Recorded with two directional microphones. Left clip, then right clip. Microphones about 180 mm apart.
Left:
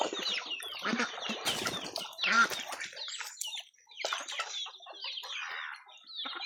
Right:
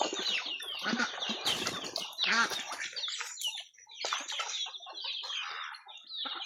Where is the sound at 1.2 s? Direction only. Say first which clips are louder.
Right 1 dB; centre (ahead or behind).